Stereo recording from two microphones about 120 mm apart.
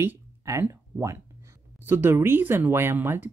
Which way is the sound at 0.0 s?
20° right (ahead or behind).